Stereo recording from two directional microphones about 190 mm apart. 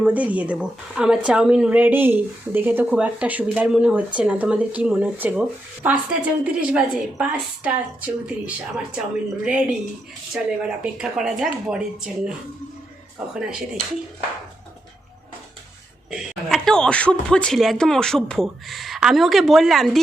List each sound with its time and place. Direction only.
0.0 s speech: 10° right (ahead or behind)
13.3 s speech: 5° right (ahead or behind)
16.0 s speech: centre (ahead or behind)